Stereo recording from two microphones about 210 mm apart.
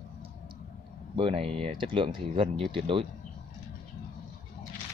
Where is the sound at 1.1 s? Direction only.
25° right (ahead or behind).